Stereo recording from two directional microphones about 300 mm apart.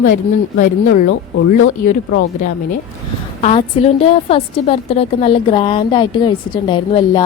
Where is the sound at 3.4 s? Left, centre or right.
Centre.